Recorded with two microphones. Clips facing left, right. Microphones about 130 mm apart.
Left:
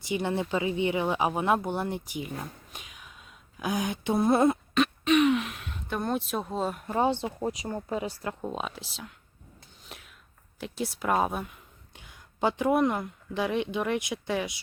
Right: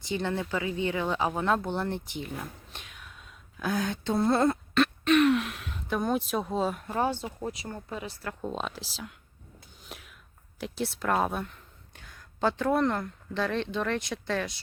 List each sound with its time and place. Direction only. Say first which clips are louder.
0.1 s speech: left 2 dB; 15° left (ahead or behind)
4.4 s throat clearing: left 1 dB; centre (ahead or behind)
6.8 s a woman's voice: left 3 dB; 20° left (ahead or behind)
8.4 s speech: even; 5° left (ahead or behind)
9.6 s a sound: right 2 dB; centre (ahead or behind)
10.6 s speech: even; 5° left (ahead or behind)